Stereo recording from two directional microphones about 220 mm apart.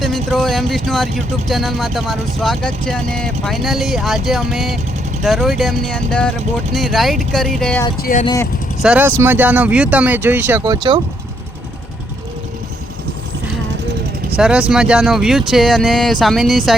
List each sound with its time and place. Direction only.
0.0 s speech: centre (ahead or behind)
8.2 s speech: 20° left (ahead or behind)
8.8 s speech: 5° right (ahead or behind)
10.6 s speech: 20° right (ahead or behind)
14.3 s speech: 5° right (ahead or behind)